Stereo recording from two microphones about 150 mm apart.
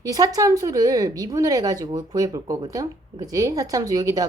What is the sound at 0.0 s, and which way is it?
Speech, 25° right (ahead or behind).